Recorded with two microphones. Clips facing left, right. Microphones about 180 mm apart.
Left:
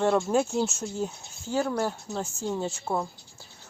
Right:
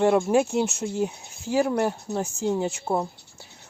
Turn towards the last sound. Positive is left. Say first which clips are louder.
# right 4 dB
turn(degrees=-15)  # may be behind; listen again after turning